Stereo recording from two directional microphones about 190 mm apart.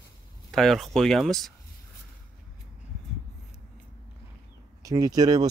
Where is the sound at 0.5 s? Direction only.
Centre (ahead or behind).